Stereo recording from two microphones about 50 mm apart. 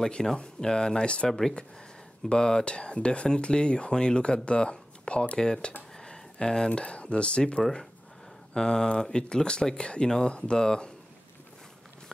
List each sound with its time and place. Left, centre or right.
0.0 s speech: centre